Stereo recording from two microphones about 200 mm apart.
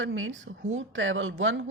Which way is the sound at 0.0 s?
75° right (ahead or behind).